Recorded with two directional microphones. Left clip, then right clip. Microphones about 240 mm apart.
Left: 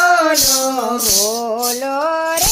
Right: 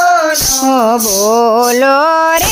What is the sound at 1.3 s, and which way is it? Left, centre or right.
Child singing, right.